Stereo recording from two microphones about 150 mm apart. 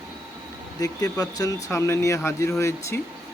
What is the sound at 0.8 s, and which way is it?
Speech, 25° left (ahead or behind).